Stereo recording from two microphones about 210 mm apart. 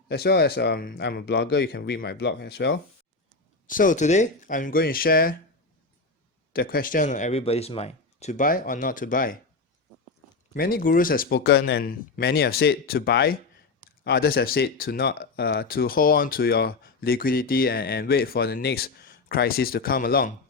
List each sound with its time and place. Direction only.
0.1 s speech: 50° left (ahead or behind)
3.7 s speech: 40° left (ahead or behind)
6.5 s speech: 45° left (ahead or behind)
10.5 s speech: 45° left (ahead or behind)